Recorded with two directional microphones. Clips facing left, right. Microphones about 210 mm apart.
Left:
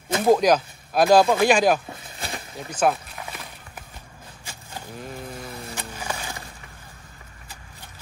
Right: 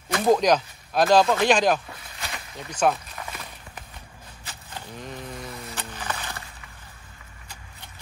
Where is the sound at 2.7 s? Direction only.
5° left (ahead or behind).